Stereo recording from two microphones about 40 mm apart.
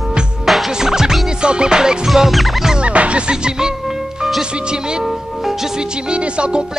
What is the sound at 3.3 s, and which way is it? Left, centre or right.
Music, centre.